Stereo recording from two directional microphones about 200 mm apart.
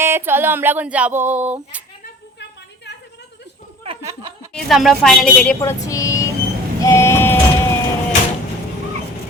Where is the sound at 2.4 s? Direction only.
60° left (ahead or behind).